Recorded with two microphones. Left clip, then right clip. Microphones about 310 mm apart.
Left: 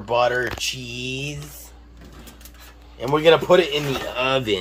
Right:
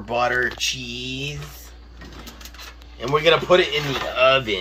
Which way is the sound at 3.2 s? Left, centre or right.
Left.